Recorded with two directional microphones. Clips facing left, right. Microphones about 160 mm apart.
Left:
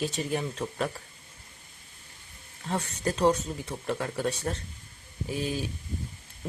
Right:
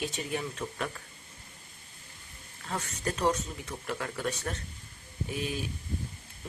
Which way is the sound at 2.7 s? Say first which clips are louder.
Left 4 dB; 30° left (ahead or behind).